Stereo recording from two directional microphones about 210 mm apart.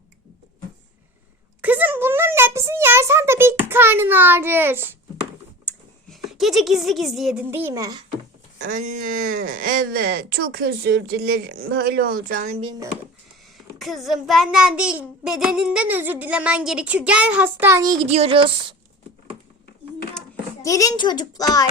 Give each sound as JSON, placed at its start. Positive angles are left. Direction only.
{"t": 1.6, "sound": "a sound", "side_deg": -10}
{"t": 5.6, "sound": "speech", "side_deg": 0}
{"t": 8.6, "sound": "speech", "side_deg": -40}
{"t": 13.7, "sound": "a child's voice", "side_deg": 0}
{"t": 18.1, "sound": "speech", "side_deg": -25}
{"t": 20.6, "sound": "a child's voice", "side_deg": 15}